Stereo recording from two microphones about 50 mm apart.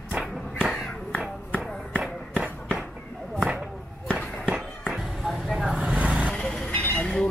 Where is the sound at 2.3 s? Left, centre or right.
Centre.